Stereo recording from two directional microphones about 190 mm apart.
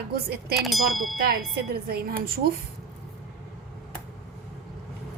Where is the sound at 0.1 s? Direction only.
55° right (ahead or behind).